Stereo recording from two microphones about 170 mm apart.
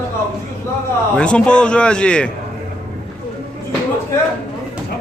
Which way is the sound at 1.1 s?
5° left (ahead or behind).